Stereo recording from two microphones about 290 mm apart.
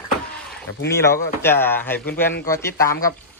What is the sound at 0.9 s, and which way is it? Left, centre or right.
Speech, centre.